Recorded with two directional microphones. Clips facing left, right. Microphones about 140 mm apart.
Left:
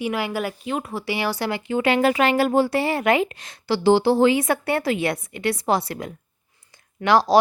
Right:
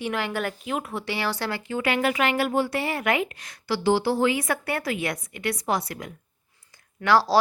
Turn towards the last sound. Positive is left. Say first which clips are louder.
# left 3 dB
turn(degrees=20)  # may be behind; listen again after turning